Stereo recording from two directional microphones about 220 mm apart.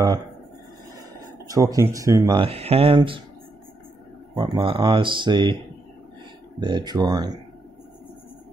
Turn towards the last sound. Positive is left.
turn(degrees=-15)  # may be behind; listen again after turning